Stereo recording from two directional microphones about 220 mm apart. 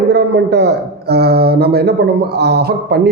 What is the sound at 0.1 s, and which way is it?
A woman's voice, 50° right (ahead or behind).